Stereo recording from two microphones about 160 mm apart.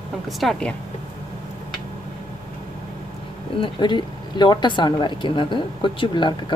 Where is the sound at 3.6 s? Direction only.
30° left (ahead or behind).